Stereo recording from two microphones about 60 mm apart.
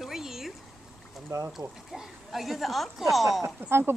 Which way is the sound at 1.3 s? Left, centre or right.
Right.